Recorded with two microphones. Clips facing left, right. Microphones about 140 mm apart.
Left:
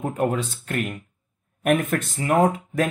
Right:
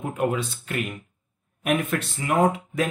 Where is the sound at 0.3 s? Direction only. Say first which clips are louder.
Left 1 dB; 45° left (ahead or behind).